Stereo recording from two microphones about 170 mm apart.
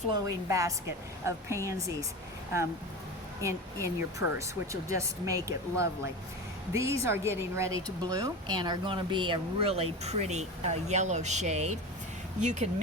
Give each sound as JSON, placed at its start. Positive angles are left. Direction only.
{"t": 0.1, "sound": "a woman's voice", "side_deg": -20}
{"t": 3.4, "sound": "speech", "side_deg": -20}